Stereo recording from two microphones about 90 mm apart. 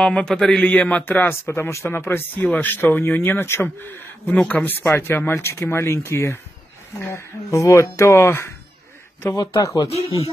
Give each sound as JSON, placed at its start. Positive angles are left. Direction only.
{"t": 0.0, "sound": "a man's voice", "side_deg": 10}
{"t": 0.7, "sound": "speech", "side_deg": 15}
{"t": 9.4, "sound": "speech", "side_deg": 40}